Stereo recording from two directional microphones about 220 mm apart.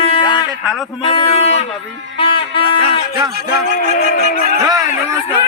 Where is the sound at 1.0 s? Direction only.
25° left (ahead or behind).